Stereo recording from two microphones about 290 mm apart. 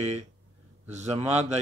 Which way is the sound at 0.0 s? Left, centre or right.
Right.